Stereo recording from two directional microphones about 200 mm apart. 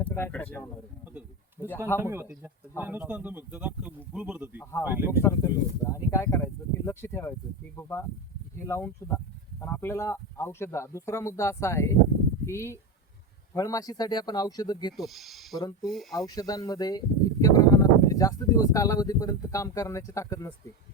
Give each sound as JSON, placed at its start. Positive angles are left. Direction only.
{"t": 0.0, "sound": "speech", "side_deg": 10}
{"t": 2.0, "sound": "speech", "side_deg": -10}
{"t": 5.2, "sound": "speech", "side_deg": 15}
{"t": 14.9, "sound": "speech", "side_deg": 0}
{"t": 15.5, "sound": "speech", "side_deg": 20}
{"t": 15.9, "sound": "speech", "side_deg": 0}
{"t": 16.1, "sound": "speech", "side_deg": 20}